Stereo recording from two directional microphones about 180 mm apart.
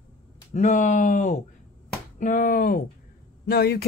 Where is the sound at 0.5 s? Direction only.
45° left (ahead or behind).